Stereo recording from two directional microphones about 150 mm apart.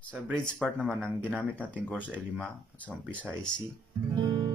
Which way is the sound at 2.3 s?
10° left (ahead or behind).